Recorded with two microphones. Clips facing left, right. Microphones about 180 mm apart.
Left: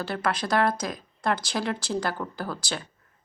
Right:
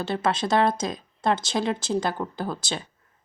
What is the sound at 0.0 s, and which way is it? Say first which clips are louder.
Speech: right 3 dB; 25° right (ahead or behind).